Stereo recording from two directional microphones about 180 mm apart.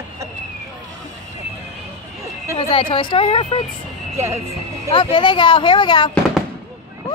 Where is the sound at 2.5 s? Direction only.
30° left (ahead or behind).